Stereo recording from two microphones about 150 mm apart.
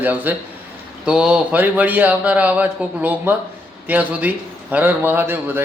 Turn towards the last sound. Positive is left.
turn(degrees=-15)  # may be behind; listen again after turning